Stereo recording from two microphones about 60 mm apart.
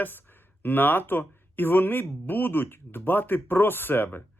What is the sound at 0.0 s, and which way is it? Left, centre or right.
Speech, left.